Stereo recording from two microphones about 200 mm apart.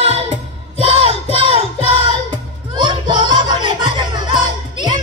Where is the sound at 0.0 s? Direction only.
30° right (ahead or behind).